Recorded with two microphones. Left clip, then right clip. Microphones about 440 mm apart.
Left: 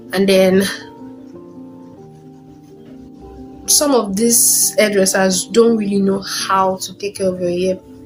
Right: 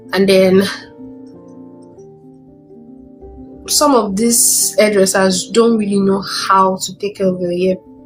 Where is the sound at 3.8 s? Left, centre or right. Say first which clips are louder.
Right 3 dB; left.